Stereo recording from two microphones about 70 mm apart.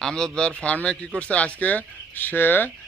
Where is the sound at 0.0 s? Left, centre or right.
Centre.